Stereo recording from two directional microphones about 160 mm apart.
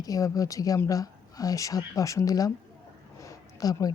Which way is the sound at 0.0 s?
20° left (ahead or behind).